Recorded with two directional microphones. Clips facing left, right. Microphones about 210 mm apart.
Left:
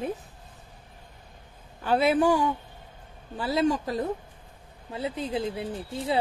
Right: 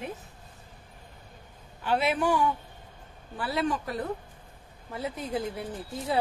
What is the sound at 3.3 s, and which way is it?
Speech, 20° left (ahead or behind).